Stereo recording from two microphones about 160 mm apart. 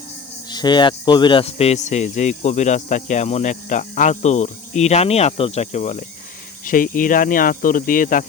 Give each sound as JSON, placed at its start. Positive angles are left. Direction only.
{"t": 0.5, "sound": "speech", "side_deg": 25}
{"t": 6.7, "sound": "speech", "side_deg": 60}